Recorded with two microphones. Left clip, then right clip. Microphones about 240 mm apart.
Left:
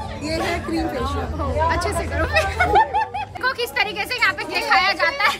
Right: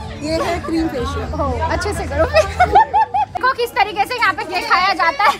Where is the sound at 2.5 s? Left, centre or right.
Centre.